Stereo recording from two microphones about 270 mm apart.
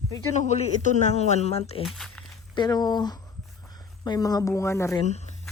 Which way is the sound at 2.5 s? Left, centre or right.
Centre.